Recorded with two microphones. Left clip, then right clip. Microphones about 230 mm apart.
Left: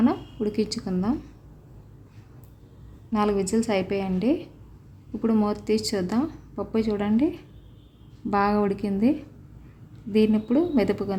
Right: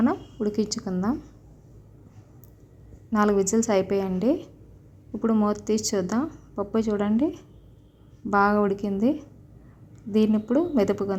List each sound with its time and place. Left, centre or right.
0.0 s a sound: centre
0.5 s a woman's voice: centre
3.1 s a woman's voice: centre